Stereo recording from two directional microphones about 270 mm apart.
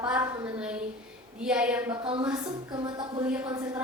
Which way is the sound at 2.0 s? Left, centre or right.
Centre.